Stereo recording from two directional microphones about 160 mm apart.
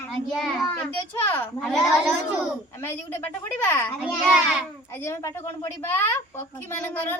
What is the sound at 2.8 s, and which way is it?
A woman's voice, 15° left (ahead or behind).